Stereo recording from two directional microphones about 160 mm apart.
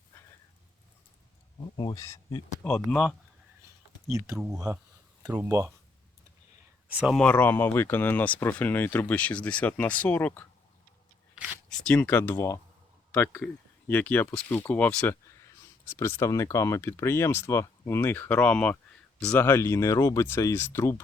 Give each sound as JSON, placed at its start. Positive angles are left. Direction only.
{"t": 1.7, "sound": "speech", "side_deg": 25}
{"t": 2.6, "sound": "speech", "side_deg": 5}
{"t": 4.0, "sound": "speech", "side_deg": -20}
{"t": 6.9, "sound": "speech", "side_deg": -5}
{"t": 7.2, "sound": "speech", "side_deg": 10}
{"t": 11.7, "sound": "speech", "side_deg": 10}